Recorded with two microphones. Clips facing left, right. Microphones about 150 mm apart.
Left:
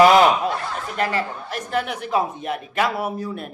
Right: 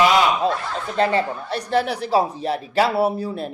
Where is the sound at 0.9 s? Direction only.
30° right (ahead or behind).